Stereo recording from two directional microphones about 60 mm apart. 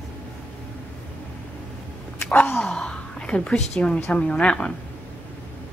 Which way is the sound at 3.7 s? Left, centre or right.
Centre.